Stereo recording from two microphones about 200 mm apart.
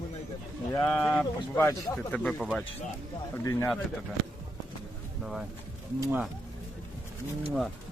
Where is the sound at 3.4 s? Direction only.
15° left (ahead or behind).